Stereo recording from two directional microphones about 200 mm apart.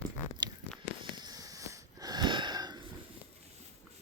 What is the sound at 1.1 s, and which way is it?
Wheeze, 20° right (ahead or behind).